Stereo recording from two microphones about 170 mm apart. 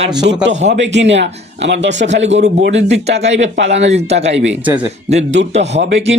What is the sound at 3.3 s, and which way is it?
Speech, 90° right.